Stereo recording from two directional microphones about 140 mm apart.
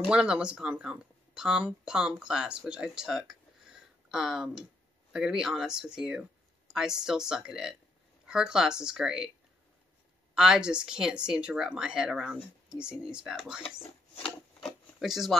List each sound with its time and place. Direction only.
0.1 s speech: 5° right (ahead or behind)
2.7 s a sound: 5° right (ahead or behind)
5.1 s speech: 5° right (ahead or behind)
10.3 s speech: 5° right (ahead or behind)
14.1 s filing: 45° left (ahead or behind)
15.0 s speech: centre (ahead or behind)